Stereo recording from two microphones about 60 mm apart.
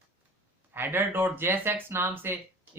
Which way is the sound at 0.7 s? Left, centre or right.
Right.